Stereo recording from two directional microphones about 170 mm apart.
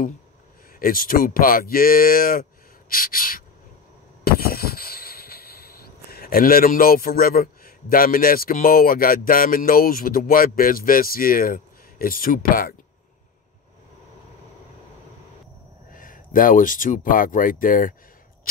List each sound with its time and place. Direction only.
0.7 s speech: 55° left (ahead or behind)
4.2 s a sound: 65° left (ahead or behind)
15.9 s speech: 55° left (ahead or behind)